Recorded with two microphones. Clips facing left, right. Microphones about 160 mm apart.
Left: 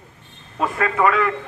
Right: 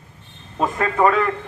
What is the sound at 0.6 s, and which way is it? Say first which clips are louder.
Speech: right 1 dB; 25° right (ahead or behind).